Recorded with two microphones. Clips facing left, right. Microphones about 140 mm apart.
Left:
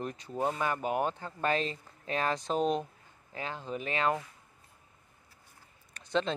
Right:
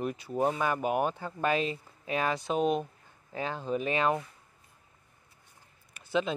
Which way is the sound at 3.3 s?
20° right (ahead or behind).